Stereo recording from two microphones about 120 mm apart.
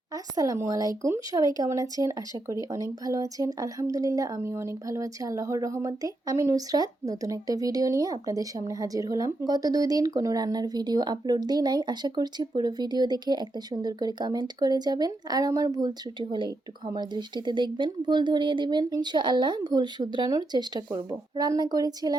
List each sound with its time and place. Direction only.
0.1 s speech: 30° right (ahead or behind)